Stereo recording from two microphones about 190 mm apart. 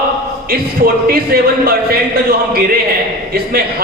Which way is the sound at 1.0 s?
50° right (ahead or behind).